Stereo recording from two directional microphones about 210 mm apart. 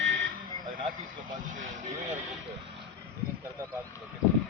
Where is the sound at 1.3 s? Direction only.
35° right (ahead or behind).